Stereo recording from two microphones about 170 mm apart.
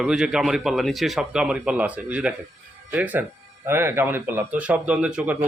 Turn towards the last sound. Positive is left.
turn(degrees=-10)  # may be behind; listen again after turning